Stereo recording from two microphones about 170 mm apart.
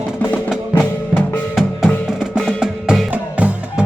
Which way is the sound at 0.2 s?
10° left (ahead or behind).